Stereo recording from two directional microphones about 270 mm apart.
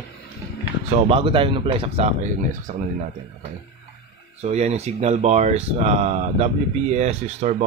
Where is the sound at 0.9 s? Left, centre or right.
Centre.